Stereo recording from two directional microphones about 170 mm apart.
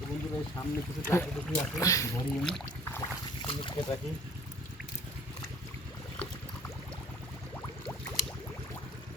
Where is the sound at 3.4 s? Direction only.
30° left (ahead or behind).